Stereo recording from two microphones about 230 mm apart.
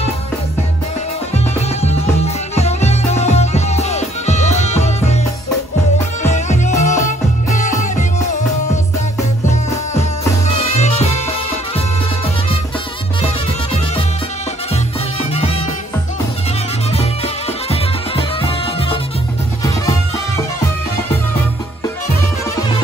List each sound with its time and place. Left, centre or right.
1.3 s music: left
6.3 s music: left
9.5 s music: left
15.3 s music: left
16.9 s music: left